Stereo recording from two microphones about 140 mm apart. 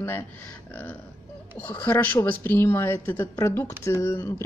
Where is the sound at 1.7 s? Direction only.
15° left (ahead or behind).